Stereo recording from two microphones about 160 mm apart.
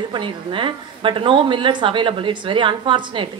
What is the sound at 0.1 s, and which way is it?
A woman's voice, 30° right (ahead or behind).